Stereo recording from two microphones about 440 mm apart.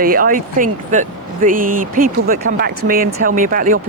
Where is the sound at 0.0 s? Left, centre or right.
Centre.